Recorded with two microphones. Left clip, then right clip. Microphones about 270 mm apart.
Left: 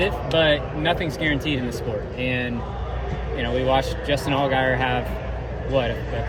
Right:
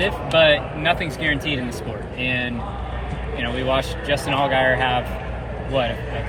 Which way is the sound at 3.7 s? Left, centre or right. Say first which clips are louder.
Even; left.